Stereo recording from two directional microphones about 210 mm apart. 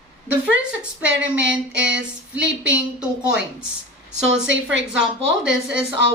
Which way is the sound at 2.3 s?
5° right (ahead or behind).